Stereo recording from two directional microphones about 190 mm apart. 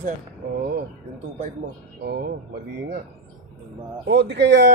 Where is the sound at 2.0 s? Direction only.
55° right (ahead or behind).